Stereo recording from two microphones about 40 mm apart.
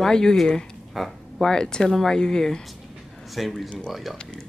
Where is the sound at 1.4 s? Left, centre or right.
Centre.